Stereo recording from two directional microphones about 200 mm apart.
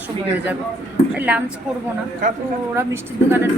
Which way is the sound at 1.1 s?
5° right (ahead or behind).